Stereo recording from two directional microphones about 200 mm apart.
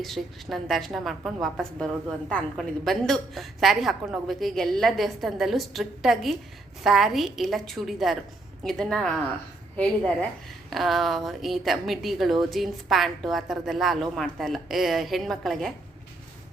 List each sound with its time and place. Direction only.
0.0 s a woman's voice: centre (ahead or behind)